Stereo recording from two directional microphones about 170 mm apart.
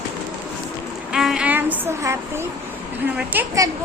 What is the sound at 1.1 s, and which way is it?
A woman's voice, 5° right (ahead or behind).